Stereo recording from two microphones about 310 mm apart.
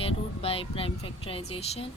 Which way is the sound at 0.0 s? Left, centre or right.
Centre.